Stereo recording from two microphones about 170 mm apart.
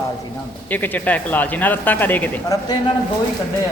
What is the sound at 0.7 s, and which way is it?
Speech, 10° left (ahead or behind).